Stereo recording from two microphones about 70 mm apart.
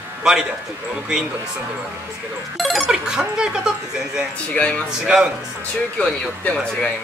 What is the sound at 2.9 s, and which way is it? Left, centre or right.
Speech, centre.